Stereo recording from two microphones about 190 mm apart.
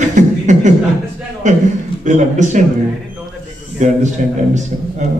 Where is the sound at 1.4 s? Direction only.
40° right (ahead or behind).